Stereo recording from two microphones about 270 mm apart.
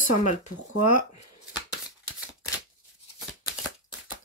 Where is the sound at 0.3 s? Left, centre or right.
Left.